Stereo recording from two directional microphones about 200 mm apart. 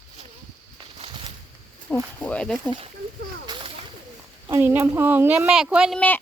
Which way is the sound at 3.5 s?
25° right (ahead or behind).